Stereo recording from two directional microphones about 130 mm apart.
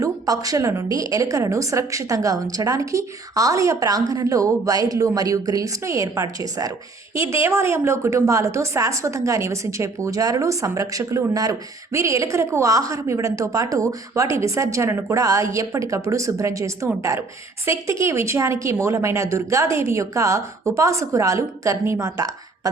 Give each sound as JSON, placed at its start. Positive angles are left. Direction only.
{"t": 0.0, "sound": "speech", "side_deg": -25}